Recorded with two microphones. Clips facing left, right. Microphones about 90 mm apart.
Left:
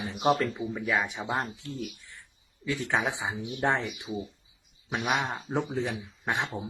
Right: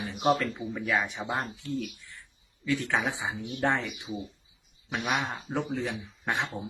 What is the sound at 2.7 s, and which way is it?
Speech, 20° left (ahead or behind).